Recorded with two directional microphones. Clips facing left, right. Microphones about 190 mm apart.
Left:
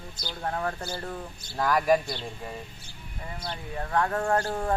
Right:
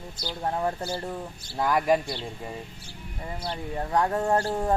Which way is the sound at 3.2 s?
30° right (ahead or behind).